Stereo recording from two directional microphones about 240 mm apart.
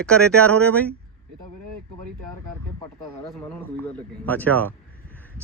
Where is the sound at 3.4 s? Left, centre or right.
Centre.